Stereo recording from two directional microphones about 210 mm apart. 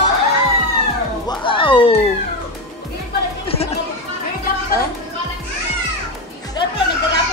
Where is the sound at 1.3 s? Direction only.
25° left (ahead or behind).